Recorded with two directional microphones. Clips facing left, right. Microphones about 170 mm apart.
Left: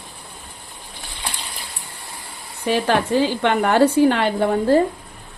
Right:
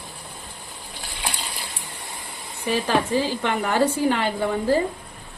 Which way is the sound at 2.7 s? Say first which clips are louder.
Left 3 dB; 70° left (ahead or behind).